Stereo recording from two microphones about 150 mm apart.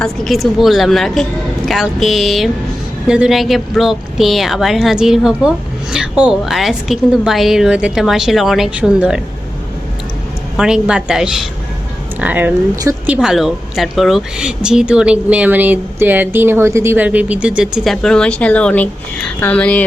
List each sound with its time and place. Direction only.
0.0 s a woman's voice: centre (ahead or behind)
10.6 s a woman's voice: 5° right (ahead or behind)
12.7 s a woman's voice: 20° right (ahead or behind)
13.1 s a woman's voice: 5° right (ahead or behind)